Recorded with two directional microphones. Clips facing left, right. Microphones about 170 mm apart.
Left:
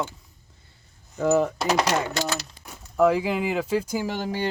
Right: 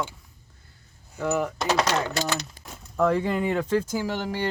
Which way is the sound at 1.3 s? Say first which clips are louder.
Left 5 dB; 30° left (ahead or behind).